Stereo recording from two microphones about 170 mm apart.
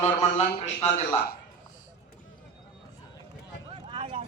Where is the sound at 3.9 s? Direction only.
35° right (ahead or behind).